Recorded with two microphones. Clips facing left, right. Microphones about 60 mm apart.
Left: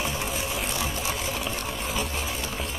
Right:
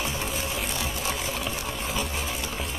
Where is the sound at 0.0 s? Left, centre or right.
Centre.